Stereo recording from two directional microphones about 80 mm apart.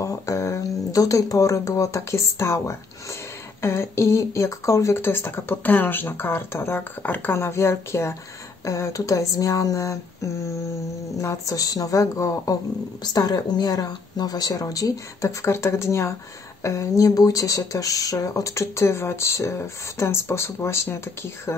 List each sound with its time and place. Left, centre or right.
0.0 s speech: left
7.3 s speech: left
13.0 s speech: left